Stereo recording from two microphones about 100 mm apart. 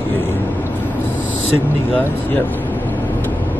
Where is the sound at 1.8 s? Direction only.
20° left (ahead or behind).